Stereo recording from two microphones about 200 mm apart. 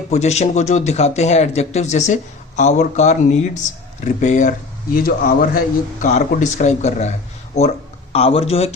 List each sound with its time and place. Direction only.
0.1 s a man's voice: 35° left (ahead or behind)